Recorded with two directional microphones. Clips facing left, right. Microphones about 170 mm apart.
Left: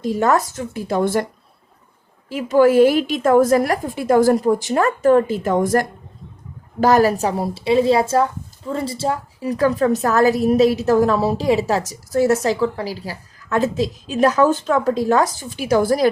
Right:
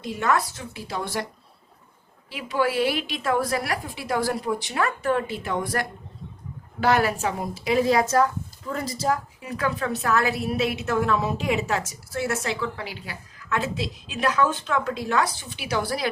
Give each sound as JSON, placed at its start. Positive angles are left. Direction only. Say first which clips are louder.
{"t": 0.0, "sound": "a woman's voice", "louder": "left 7 dB", "side_deg": 40}
{"t": 2.3, "sound": "a woman's voice", "louder": "left 11 dB", "side_deg": 45}